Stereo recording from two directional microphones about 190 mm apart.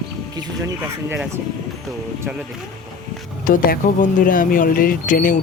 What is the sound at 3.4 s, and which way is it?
Speech, 45° left (ahead or behind).